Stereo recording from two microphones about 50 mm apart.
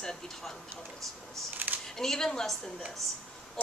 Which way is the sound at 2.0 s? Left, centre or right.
Centre.